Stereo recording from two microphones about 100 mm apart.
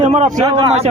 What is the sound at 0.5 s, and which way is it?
Speech, 90° right.